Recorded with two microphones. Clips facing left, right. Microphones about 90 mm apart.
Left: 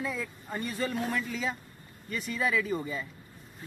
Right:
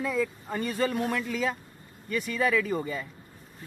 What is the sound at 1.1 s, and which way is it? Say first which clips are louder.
Speech: right 3 dB; 65° right (ahead or behind).